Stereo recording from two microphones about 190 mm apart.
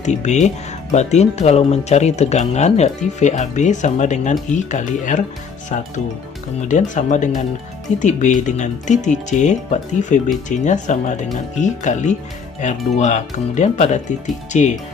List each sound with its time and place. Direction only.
0.0 s speech: 40° left (ahead or behind)
6.7 s speech: 40° left (ahead or behind)